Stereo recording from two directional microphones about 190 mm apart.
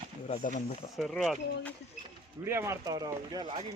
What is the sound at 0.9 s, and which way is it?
Speech, centre (ahead or behind).